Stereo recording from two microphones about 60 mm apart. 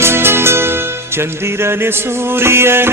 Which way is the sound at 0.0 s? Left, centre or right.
Right.